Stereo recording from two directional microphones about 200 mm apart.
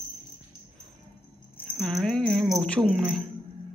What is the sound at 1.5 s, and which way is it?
Speech, centre (ahead or behind).